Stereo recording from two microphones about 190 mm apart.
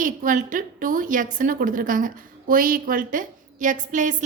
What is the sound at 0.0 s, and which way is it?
A woman's voice, 45° right (ahead or behind).